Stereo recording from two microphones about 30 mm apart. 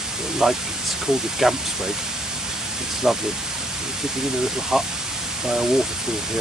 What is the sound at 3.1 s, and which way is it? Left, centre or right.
Speech, centre.